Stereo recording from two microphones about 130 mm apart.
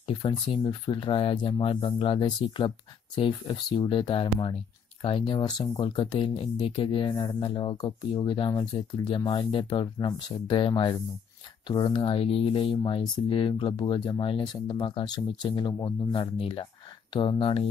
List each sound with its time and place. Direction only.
0.0 s speech: 40° left (ahead or behind)